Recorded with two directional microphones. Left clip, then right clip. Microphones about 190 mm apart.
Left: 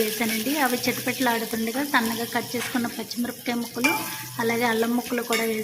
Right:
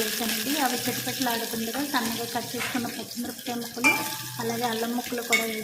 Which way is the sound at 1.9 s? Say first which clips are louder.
Left 6 dB; 20° left (ahead or behind).